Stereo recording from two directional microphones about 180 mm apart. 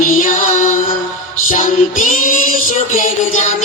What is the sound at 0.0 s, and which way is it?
Music, 45° left (ahead or behind).